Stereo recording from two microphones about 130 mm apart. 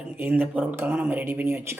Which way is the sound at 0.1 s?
15° right (ahead or behind).